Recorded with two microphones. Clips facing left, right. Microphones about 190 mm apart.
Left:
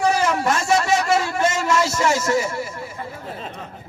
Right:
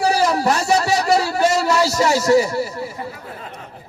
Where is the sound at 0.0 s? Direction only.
35° right (ahead or behind).